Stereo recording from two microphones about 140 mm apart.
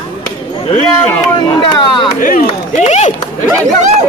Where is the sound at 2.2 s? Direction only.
70° left (ahead or behind).